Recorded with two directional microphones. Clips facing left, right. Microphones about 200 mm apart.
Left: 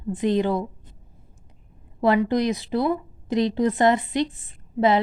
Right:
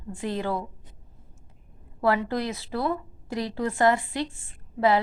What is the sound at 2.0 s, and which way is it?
A woman's voice, 20° left (ahead or behind).